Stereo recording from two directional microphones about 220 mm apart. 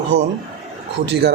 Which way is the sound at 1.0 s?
50° right (ahead or behind).